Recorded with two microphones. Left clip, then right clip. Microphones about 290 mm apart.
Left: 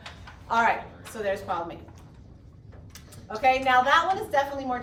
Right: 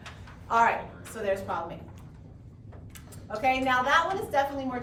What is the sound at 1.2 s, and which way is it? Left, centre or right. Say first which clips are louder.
Speech: left 1 dB; left.